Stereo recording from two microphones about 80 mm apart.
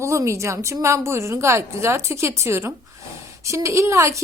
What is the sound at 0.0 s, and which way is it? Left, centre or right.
A woman's voice, right.